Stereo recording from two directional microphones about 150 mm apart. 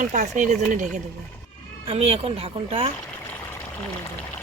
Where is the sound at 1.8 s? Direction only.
40° right (ahead or behind).